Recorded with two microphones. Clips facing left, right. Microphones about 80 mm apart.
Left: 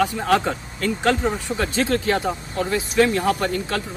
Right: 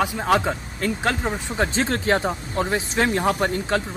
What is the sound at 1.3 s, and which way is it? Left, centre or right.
Speech, right.